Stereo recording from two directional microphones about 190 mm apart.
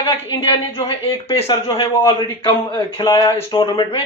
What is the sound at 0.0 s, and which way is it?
Speech, 30° left (ahead or behind).